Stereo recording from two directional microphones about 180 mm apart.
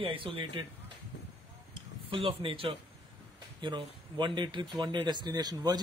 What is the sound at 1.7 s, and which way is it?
Speech, 30° right (ahead or behind).